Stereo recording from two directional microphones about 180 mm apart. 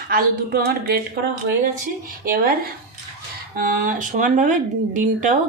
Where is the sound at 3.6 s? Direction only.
50° right (ahead or behind).